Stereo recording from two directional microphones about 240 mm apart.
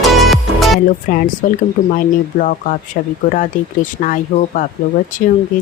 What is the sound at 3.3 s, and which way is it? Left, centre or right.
Speech, left.